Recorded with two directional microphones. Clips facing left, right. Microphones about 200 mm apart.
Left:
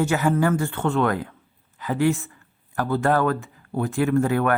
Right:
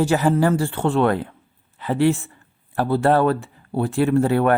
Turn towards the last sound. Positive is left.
turn(degrees=-30)  # may be behind; listen again after turning